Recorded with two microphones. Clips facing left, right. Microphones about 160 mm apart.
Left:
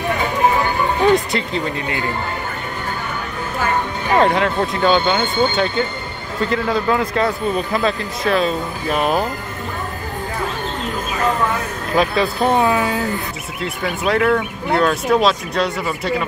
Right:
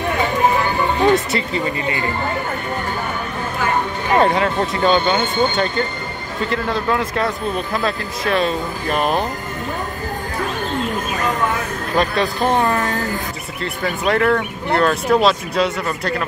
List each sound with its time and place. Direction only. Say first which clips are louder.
1.1 s a man's voice: left 1 dB; centre (ahead or behind)
4.2 s a man's voice: left 1 dB; centre (ahead or behind)
12.0 s a man's voice: left 1 dB; centre (ahead or behind)